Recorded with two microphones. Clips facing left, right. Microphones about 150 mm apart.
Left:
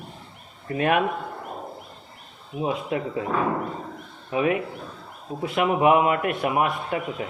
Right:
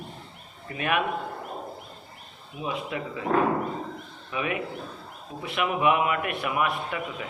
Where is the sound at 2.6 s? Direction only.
35° left (ahead or behind).